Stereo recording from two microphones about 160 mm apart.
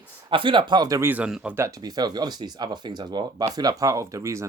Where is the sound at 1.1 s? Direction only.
5° right (ahead or behind).